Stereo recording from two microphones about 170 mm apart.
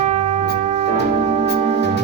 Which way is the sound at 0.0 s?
45° right (ahead or behind).